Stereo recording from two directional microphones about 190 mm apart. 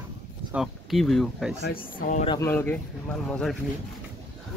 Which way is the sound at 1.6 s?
50° left (ahead or behind).